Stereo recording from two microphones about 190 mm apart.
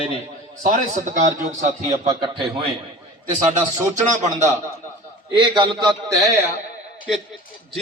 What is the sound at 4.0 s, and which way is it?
Speech, 40° right (ahead or behind).